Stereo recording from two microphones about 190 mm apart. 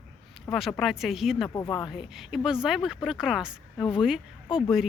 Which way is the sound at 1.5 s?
20° left (ahead or behind).